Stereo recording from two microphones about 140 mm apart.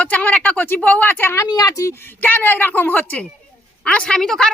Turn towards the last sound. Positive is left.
turn(degrees=5)  # may be behind; listen again after turning